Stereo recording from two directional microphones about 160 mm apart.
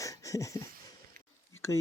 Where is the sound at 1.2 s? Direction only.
60° right (ahead or behind).